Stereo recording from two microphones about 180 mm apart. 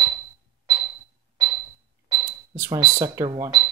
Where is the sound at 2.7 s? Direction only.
15° right (ahead or behind).